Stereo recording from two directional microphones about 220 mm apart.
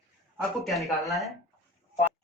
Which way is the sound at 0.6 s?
Centre (ahead or behind).